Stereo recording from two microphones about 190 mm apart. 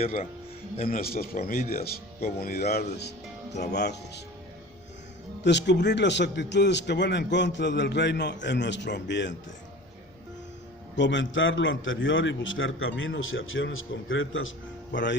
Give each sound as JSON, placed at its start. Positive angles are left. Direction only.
{"t": 0.0, "sound": "a man's voice", "side_deg": 40}
{"t": 5.4, "sound": "a man's voice", "side_deg": 65}
{"t": 10.9, "sound": "a man's voice", "side_deg": 70}
{"t": 14.9, "sound": "speech", "side_deg": 75}